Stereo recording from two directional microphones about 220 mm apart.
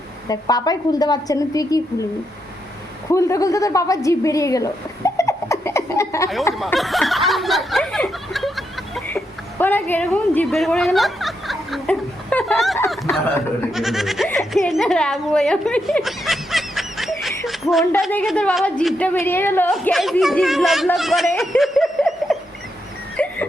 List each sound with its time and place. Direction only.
0.3 s a woman's voice: 15° left (ahead or behind)
3.1 s a woman's voice: 15° left (ahead or behind)
6.5 s a sound: centre (ahead or behind)
18.0 s a woman's voice: centre (ahead or behind)
21.3 s snicker: centre (ahead or behind)
23.1 s dog: 5° left (ahead or behind)